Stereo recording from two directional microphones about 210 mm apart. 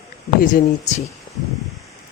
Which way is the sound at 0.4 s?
40° left (ahead or behind).